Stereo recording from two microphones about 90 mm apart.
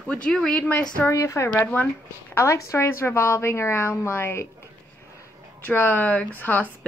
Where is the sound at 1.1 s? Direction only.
35° left (ahead or behind).